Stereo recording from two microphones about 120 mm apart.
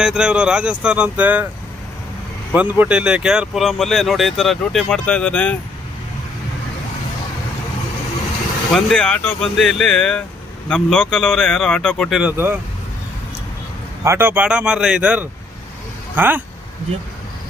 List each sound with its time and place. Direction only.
0.0 s speech: 5° right (ahead or behind)
2.6 s speech: 15° right (ahead or behind); by 5.5 s 10° left (ahead or behind)
8.7 s speech: 5° left (ahead or behind)
12.2 s speech: 15° right (ahead or behind)
14.0 s speech: 20° right (ahead or behind)